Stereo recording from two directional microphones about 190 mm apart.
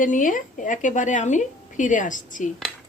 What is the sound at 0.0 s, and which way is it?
A woman's voice, 45° left (ahead or behind).